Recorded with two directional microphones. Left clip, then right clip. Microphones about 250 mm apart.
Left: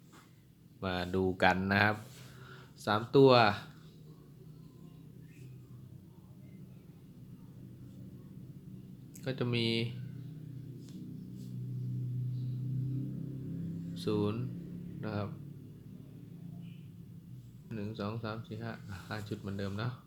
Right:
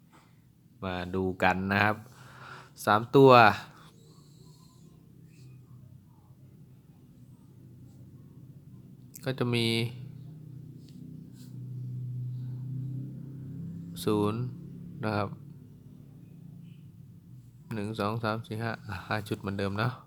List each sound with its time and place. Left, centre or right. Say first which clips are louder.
0.8 s speech: right 1 dB; centre
2.4 s speech: right 9 dB; right
9.1 s speech: right 5 dB; centre
13.9 s speech: right 6 dB; right
17.7 s speech: right 8 dB; right